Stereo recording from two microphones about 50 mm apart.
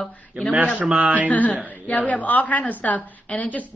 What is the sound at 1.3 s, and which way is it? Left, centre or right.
A woman's voice, left.